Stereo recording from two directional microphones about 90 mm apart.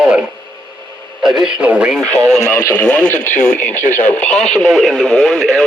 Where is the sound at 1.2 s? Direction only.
5° right (ahead or behind).